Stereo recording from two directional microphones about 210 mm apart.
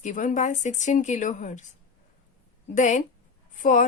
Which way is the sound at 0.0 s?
35° left (ahead or behind).